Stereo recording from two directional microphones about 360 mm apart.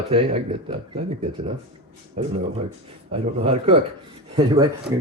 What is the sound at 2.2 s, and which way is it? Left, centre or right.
Speech, centre.